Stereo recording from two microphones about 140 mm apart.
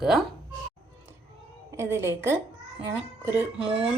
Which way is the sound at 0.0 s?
5° right (ahead or behind).